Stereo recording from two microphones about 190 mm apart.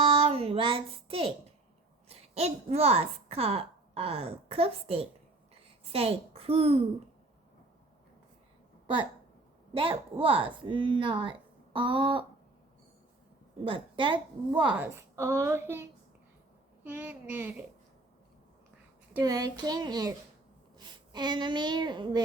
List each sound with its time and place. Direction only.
0.0 s a sound: 30° right (ahead or behind)
2.0 s a woman's voice: 35° right (ahead or behind)
9.7 s speech: 25° right (ahead or behind)
13.7 s speech: 25° right (ahead or behind)
14.7 s a woman's voice: 10° right (ahead or behind)
19.2 s a child's voice: 20° right (ahead or behind)